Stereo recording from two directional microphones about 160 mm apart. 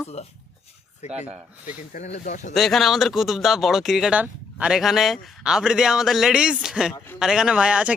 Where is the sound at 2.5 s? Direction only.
Centre (ahead or behind).